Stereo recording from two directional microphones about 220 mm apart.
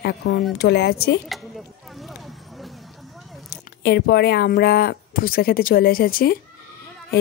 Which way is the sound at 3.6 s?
50° left (ahead or behind).